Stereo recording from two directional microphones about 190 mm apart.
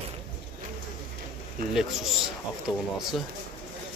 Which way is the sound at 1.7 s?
Centre (ahead or behind).